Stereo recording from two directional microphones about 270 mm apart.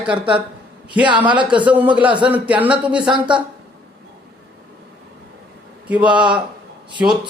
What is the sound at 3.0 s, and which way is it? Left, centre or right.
Speech, centre.